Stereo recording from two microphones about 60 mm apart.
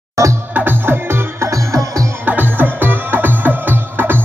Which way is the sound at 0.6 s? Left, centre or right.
Right.